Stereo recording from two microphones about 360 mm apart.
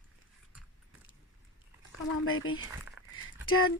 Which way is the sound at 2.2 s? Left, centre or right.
Left.